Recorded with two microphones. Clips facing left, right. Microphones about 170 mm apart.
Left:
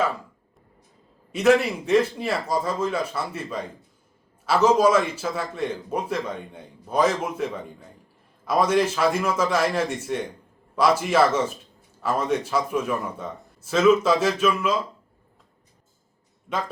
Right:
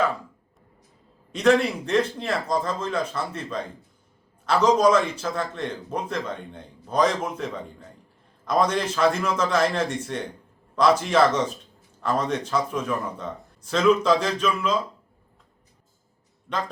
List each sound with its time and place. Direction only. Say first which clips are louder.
1.3 s a man's voice: left 1 dB; 5° left (ahead or behind)
16.5 s a man's voice: left 1 dB; 5° left (ahead or behind)